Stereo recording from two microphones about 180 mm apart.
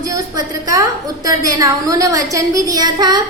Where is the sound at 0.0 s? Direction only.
20° right (ahead or behind).